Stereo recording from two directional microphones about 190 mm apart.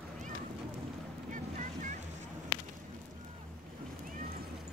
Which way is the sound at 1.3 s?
45° right (ahead or behind).